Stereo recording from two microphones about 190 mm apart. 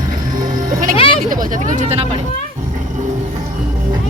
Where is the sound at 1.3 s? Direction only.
40° right (ahead or behind).